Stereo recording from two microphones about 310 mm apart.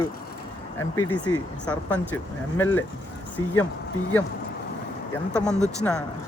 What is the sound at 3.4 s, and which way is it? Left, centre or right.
Speech, left.